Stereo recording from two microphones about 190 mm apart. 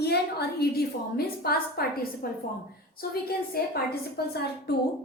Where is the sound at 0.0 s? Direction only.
60° left (ahead or behind).